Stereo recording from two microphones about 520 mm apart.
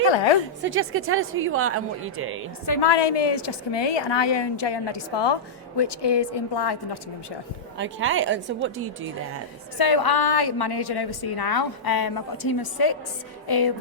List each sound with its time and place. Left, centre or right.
0.6 s a woman's voice: right
2.8 s a woman's voice: left
7.8 s a woman's voice: right
9.7 s a woman's voice: left